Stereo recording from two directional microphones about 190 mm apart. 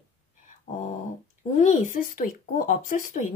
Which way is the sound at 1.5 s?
40° left (ahead or behind).